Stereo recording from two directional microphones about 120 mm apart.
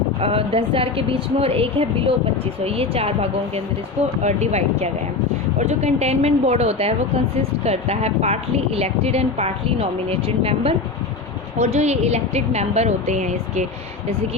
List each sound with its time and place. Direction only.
0.2 s a woman's voice: 55° right (ahead or behind)
4.2 s a woman's voice: 70° right (ahead or behind); by 10.8 s 50° right (ahead or behind)
11.5 s a woman's voice: 70° right (ahead or behind)